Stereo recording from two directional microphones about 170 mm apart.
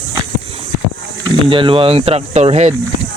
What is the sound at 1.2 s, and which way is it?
Speech, 30° right (ahead or behind).